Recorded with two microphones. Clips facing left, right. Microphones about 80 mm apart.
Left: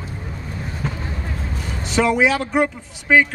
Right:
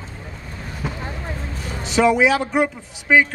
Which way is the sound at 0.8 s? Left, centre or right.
Centre.